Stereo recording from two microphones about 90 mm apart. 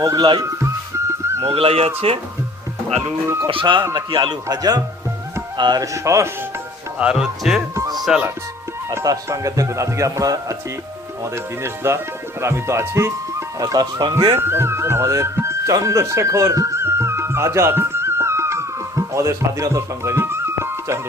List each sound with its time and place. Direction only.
0.2 s speech: 55° right (ahead or behind)
0.6 s music: 30° right (ahead or behind)
1.4 s speech: 90° right
3.4 s speech: 70° right (ahead or behind)
3.9 s speech: 55° right (ahead or behind)
4.4 s speech: 45° right (ahead or behind)
5.8 s speech: 35° right (ahead or behind)
7.0 s speech: 10° right (ahead or behind)
7.8 s music: 45° right (ahead or behind)
9.0 s speech: 40° right (ahead or behind)
11.6 s speech: 30° right (ahead or behind)
14.0 s speech: 60° right (ahead or behind)
14.3 s music: 25° right (ahead or behind)